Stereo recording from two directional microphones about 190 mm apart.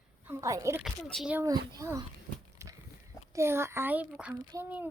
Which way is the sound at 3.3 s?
15° right (ahead or behind).